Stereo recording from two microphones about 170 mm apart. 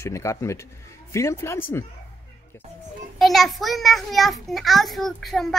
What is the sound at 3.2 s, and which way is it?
A child's voice, centre (ahead or behind).